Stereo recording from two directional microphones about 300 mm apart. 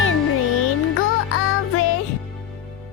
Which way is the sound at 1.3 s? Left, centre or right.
Left.